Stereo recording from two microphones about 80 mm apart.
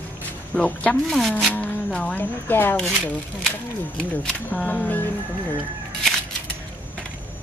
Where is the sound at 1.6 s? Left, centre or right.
Centre.